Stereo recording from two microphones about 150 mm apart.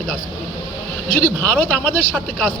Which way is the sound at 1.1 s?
75° left (ahead or behind).